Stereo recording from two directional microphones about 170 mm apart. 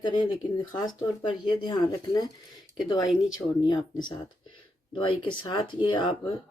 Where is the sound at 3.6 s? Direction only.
25° left (ahead or behind).